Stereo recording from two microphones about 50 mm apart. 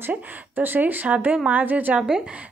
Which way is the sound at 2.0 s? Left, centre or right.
Centre.